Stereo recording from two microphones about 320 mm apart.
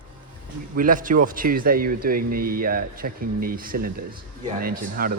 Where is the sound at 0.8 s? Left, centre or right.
Right.